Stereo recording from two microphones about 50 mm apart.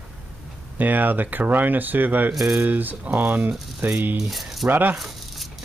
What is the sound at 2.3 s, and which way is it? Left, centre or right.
Speech, centre.